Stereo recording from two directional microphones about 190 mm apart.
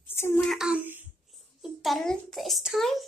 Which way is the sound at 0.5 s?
5° right (ahead or behind).